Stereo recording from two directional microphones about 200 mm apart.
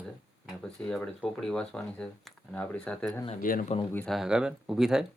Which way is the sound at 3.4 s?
45° left (ahead or behind).